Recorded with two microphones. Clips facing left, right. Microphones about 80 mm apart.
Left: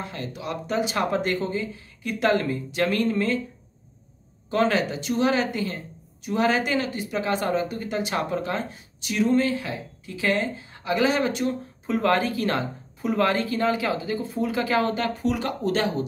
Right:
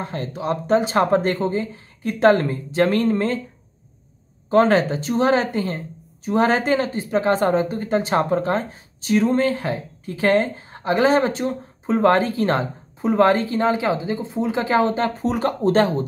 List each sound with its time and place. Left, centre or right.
0.0 s speech: right
4.5 s speech: right